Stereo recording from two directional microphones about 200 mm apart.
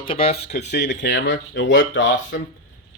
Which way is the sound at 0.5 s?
60° left (ahead or behind).